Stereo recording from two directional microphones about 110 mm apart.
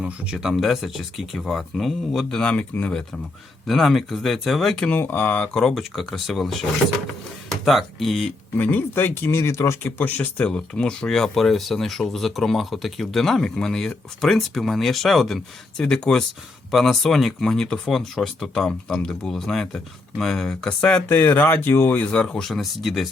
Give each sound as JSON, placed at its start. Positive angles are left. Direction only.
{"t": 0.0, "sound": "speech", "side_deg": -5}
{"t": 3.7, "sound": "speech", "side_deg": 0}
{"t": 4.9, "sound": "speech", "side_deg": 20}
{"t": 5.5, "sound": "speech", "side_deg": 0}
{"t": 8.5, "sound": "speech", "side_deg": 15}
{"t": 21.1, "sound": "speech", "side_deg": 20}